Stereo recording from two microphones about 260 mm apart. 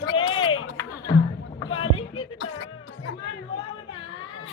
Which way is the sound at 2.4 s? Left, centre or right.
Left.